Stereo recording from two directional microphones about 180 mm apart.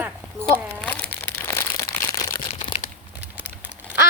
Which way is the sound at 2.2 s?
25° left (ahead or behind).